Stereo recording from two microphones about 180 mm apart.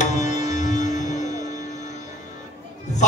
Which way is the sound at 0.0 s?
40° left (ahead or behind).